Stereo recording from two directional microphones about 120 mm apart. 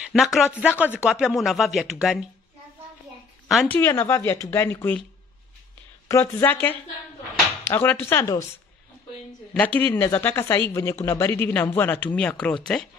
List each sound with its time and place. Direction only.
0.1 s speech: centre (ahead or behind)
0.6 s speech: 10° right (ahead or behind)
3.6 s speech: 15° left (ahead or behind)
6.0 s speech: 20° left (ahead or behind)
9.8 s speech: 15° left (ahead or behind)